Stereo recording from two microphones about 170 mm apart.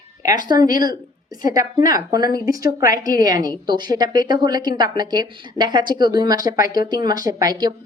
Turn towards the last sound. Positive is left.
turn(degrees=-25)  # may be behind; listen again after turning